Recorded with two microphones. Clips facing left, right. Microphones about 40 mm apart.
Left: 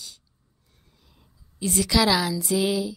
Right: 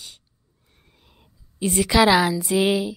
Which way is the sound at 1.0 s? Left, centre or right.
Right.